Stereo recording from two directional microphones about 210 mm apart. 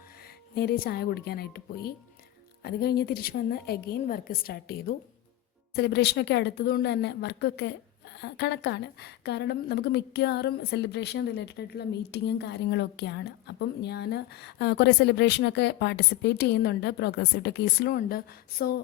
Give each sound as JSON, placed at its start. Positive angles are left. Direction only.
{"t": 0.5, "sound": "a woman's voice", "side_deg": 50}